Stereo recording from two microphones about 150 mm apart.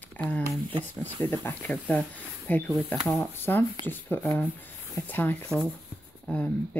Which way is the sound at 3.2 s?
15° left (ahead or behind).